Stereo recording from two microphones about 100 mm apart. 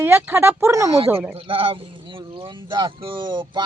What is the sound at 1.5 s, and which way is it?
Speech, 65° right (ahead or behind).